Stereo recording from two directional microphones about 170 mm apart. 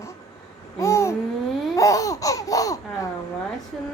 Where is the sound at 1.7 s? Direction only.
20° left (ahead or behind).